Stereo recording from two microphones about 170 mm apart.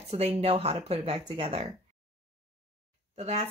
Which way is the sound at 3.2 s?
40° right (ahead or behind).